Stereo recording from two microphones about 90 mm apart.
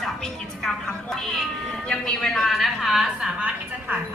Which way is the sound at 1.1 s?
5° left (ahead or behind).